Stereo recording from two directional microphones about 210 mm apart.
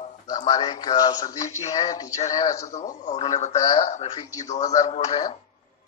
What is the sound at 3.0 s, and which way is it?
A man's voice, 30° left (ahead or behind).